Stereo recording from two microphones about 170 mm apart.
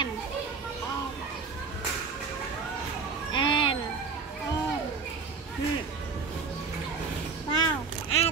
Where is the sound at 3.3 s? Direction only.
30° left (ahead or behind).